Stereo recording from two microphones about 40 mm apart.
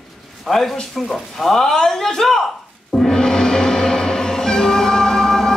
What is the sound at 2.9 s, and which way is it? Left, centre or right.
Music, centre.